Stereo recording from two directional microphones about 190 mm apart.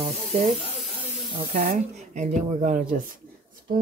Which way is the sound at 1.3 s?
50° right (ahead or behind).